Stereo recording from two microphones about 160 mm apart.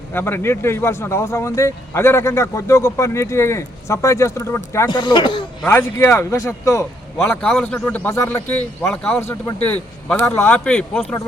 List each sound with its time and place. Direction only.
0.1 s speech: 15° left (ahead or behind)
4.9 s speech: 30° left (ahead or behind)
5.6 s speech: 15° left (ahead or behind)
7.4 s speech: 5° left (ahead or behind)